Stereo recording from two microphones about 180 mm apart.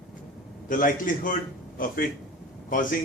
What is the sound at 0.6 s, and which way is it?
Speech, 50° left (ahead or behind).